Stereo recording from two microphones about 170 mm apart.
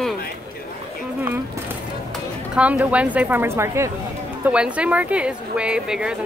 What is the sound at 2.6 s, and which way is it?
Speech, 10° right (ahead or behind).